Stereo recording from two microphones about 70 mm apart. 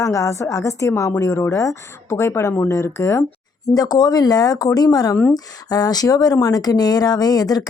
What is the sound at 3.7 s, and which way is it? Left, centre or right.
Speech, left.